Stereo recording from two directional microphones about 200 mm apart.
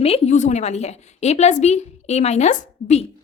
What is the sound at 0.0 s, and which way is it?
A woman's voice, 30° left (ahead or behind).